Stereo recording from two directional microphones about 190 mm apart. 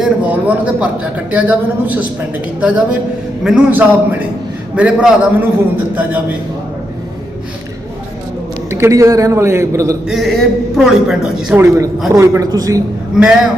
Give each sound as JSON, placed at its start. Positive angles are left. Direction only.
{"t": 0.0, "sound": "a man's voice", "side_deg": -5}
{"t": 8.7, "sound": "a man's voice", "side_deg": -15}
{"t": 10.1, "sound": "a woman's voice", "side_deg": 0}
{"t": 13.1, "sound": "a woman's voice", "side_deg": -5}